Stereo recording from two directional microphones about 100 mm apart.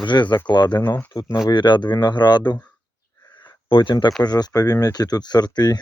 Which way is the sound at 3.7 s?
55° left (ahead or behind).